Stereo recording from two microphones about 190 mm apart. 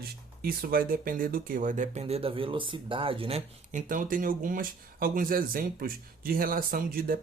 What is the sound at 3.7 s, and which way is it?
Speech, 45° right (ahead or behind).